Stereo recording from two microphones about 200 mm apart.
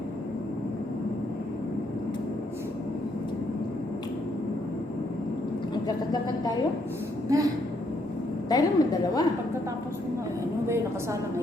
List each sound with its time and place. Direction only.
7.3 s speech: 15° right (ahead or behind)
8.4 s a woman's voice: 20° left (ahead or behind)